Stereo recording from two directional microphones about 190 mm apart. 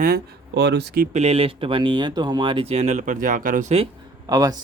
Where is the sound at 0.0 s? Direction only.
55° right (ahead or behind).